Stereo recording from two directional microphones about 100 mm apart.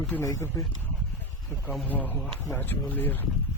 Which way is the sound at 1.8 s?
15° left (ahead or behind).